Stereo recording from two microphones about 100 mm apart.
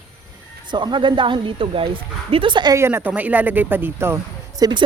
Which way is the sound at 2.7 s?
25° right (ahead or behind).